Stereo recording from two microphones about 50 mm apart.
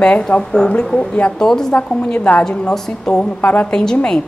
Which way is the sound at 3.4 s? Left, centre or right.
Left.